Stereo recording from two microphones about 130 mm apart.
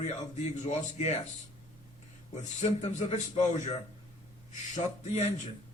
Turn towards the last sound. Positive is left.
turn(degrees=60)  # may be behind; listen again after turning